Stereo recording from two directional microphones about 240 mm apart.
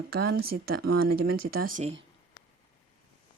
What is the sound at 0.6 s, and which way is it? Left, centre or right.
Speech, right.